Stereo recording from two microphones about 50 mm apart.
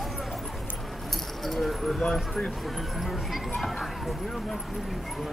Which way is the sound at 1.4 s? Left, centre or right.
Centre.